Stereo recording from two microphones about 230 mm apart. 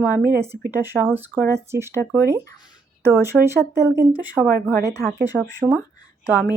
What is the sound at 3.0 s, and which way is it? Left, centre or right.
Speech, centre.